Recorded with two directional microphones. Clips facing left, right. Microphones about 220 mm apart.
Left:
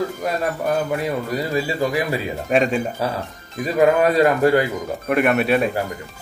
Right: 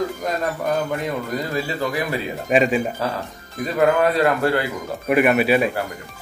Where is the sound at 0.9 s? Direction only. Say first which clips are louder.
Left 2 dB; 10° left (ahead or behind).